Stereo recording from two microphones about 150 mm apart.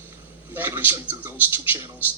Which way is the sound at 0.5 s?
15° right (ahead or behind).